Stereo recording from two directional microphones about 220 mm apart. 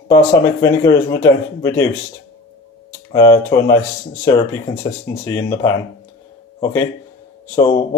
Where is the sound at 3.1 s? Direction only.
15° left (ahead or behind).